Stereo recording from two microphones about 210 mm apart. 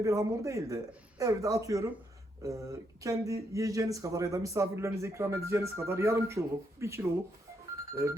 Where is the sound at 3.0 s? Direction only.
15° right (ahead or behind).